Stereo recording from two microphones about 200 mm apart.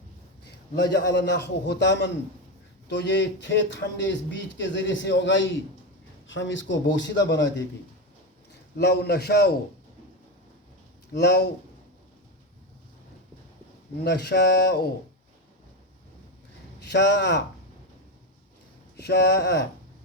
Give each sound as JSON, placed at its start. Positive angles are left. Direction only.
{"t": 0.9, "sound": "speech", "side_deg": 60}
{"t": 8.8, "sound": "speech", "side_deg": 55}
{"t": 11.1, "sound": "speech", "side_deg": 55}
{"t": 14.0, "sound": "speech", "side_deg": 55}
{"t": 16.8, "sound": "speech", "side_deg": 60}
{"t": 18.9, "sound": "speech", "side_deg": 55}